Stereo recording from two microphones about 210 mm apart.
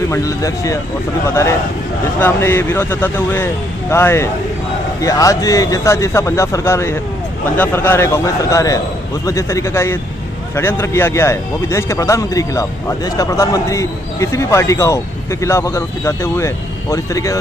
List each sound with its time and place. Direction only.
0.1 s speech: 15° left (ahead or behind)